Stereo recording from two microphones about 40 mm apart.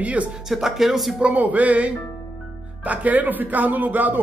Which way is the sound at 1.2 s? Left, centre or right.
Right.